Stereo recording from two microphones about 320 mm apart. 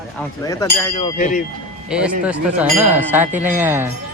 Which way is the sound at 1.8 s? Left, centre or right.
Centre.